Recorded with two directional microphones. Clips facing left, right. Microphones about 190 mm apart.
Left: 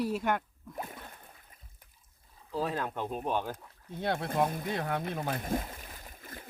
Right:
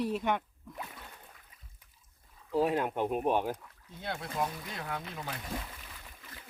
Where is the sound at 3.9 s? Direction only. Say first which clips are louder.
Left 7 dB; 55° left (ahead or behind).